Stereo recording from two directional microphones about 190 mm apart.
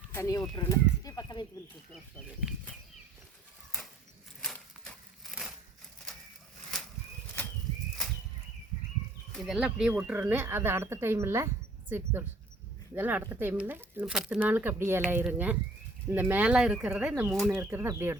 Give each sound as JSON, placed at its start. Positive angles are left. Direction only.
{"t": 0.1, "sound": "speech", "side_deg": 15}
{"t": 0.5, "sound": "bird", "side_deg": 20}
{"t": 2.1, "sound": "speech", "side_deg": 0}
{"t": 4.4, "sound": "a sound", "side_deg": 5}
{"t": 9.3, "sound": "speech", "side_deg": 0}